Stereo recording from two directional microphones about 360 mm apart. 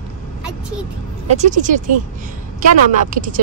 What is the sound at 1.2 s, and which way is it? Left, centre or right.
Speech, centre.